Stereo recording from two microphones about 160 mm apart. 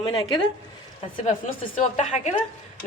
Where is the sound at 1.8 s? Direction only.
50° left (ahead or behind).